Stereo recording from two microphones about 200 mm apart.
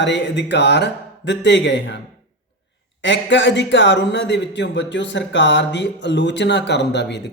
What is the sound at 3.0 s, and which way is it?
Speech, 65° left (ahead or behind).